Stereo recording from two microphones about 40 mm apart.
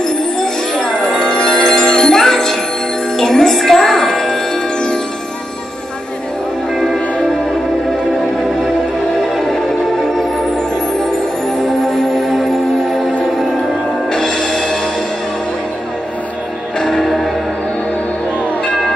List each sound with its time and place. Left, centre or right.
0.0 s music: centre
9.3 s music: centre
11.9 s music: centre
14.1 s music: centre
16.8 s music: centre